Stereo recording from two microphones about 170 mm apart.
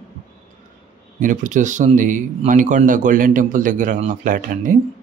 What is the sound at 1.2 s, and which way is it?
Speech, 50° right (ahead or behind).